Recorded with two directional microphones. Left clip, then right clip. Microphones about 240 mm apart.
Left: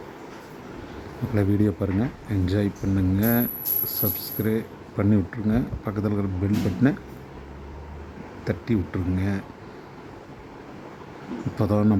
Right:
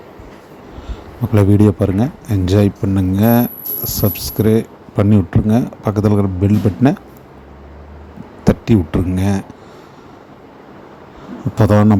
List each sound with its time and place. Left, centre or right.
1.4 s speech: right
8.4 s speech: right
11.5 s speech: right